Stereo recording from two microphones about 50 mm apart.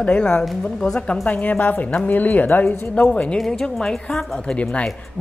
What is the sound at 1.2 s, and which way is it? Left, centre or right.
Speech, left.